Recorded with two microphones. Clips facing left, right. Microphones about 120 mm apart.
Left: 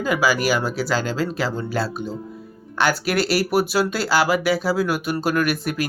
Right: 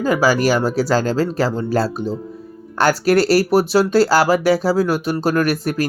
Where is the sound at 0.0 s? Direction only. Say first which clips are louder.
Right 4 dB; 35° right (ahead or behind).